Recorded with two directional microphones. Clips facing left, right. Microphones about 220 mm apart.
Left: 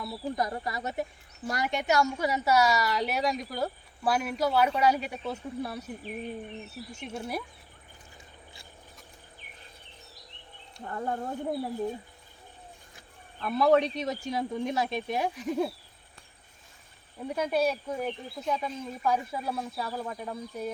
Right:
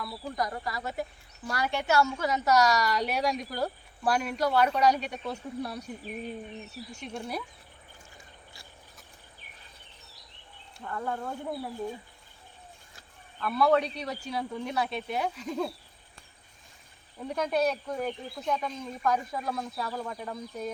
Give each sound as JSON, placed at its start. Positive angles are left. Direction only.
{"t": 0.0, "sound": "a woman's voice", "side_deg": 25}
{"t": 6.9, "sound": "speech", "side_deg": 5}
{"t": 10.8, "sound": "speech", "side_deg": 30}
{"t": 13.4, "sound": "speech", "side_deg": 20}
{"t": 17.2, "sound": "speech", "side_deg": 10}